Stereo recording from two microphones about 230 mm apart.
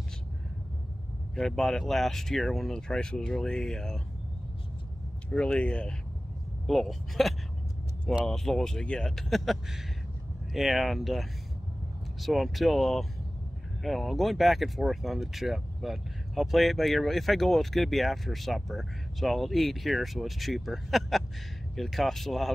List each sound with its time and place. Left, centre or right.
1.3 s speech: centre
5.3 s speech: centre